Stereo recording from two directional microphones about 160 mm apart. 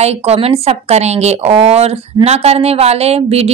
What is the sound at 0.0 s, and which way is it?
A woman's voice, 40° right (ahead or behind).